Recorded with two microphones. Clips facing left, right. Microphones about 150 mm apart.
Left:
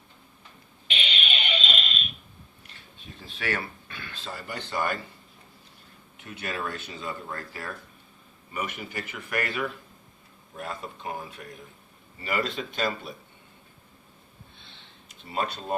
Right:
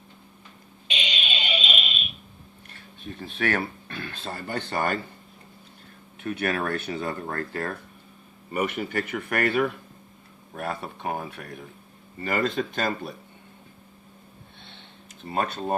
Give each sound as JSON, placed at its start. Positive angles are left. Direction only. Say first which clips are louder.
{"t": 0.9, "sound": "a sound", "louder": "even", "side_deg": -15}
{"t": 3.2, "sound": "speech", "louder": "right 5 dB", "side_deg": -55}
{"t": 6.2, "sound": "speech", "louder": "right 7 dB", "side_deg": -65}
{"t": 12.2, "sound": "speech", "louder": "right 4 dB", "side_deg": -50}
{"t": 15.3, "sound": "speech", "louder": "right 3 dB", "side_deg": -55}